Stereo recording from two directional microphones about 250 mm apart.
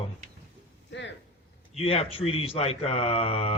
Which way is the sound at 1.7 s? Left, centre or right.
Left.